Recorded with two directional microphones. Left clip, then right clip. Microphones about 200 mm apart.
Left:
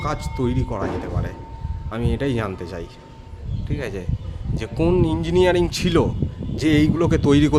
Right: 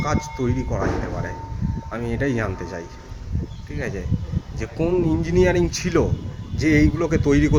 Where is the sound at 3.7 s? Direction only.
20° left (ahead or behind).